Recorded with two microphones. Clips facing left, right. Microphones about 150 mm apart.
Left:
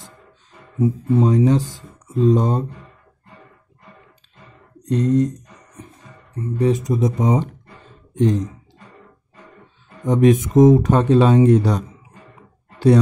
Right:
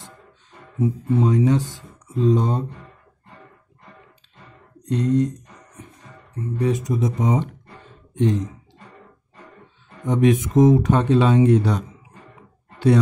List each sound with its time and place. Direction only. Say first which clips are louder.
0.7 s speech: left 3 dB; 35° left (ahead or behind)
4.8 s speech: left 2 dB; 40° left (ahead or behind)
6.6 s speech: left 4 dB; 35° left (ahead or behind)
10.0 s speech: left 3 dB; 40° left (ahead or behind)
12.7 s a sound: left 3 dB; 35° left (ahead or behind)